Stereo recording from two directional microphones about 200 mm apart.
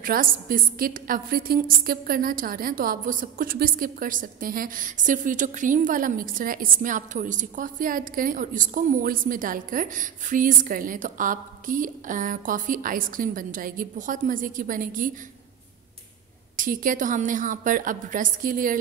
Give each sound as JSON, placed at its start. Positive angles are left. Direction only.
{"t": 0.0, "sound": "a woman's voice", "side_deg": -45}
{"t": 16.5, "sound": "a woman's voice", "side_deg": -40}